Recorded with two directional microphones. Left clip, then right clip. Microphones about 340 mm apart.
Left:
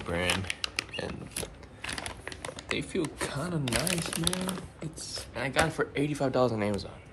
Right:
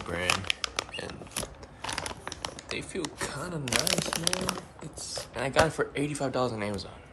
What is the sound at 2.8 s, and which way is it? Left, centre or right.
Speech, centre.